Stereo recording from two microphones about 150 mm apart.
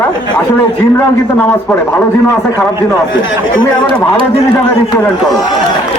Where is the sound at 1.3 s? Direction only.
15° left (ahead or behind).